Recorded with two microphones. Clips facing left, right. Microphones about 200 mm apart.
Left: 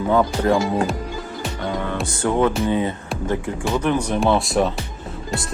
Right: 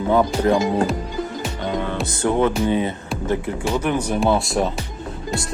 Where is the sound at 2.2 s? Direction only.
20° right (ahead or behind).